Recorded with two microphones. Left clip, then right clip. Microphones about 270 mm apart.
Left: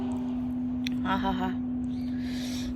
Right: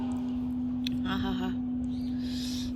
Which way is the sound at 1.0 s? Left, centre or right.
Centre.